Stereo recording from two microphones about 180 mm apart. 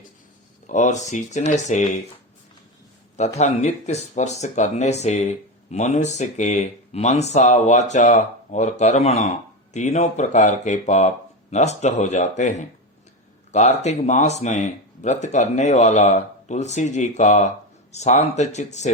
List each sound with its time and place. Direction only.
0.7 s speech: 40° left (ahead or behind)
3.2 s speech: 40° left (ahead or behind)